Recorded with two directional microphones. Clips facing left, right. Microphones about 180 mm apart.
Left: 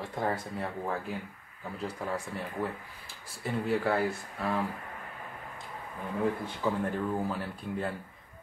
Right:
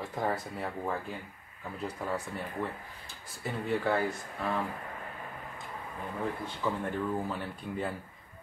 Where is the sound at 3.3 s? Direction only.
Centre (ahead or behind).